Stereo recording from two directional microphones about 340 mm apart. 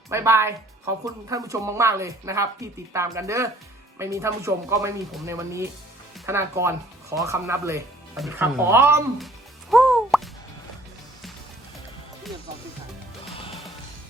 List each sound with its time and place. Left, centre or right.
0.1 s a woman's voice: centre
13.3 s music: centre